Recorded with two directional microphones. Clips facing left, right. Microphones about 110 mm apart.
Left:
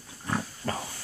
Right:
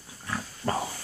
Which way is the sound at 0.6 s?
25° right (ahead or behind).